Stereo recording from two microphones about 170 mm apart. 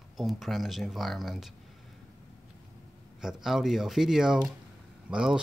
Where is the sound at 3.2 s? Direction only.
Centre (ahead or behind).